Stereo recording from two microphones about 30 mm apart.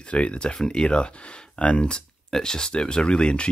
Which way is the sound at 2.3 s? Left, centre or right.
Left.